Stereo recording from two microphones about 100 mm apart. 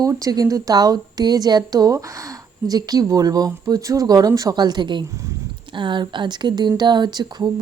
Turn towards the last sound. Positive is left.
turn(degrees=-45)  # may be behind; listen again after turning